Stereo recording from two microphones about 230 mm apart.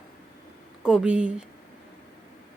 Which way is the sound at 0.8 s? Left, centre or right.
Centre.